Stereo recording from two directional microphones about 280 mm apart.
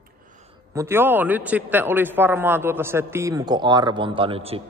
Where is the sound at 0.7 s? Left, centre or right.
Centre.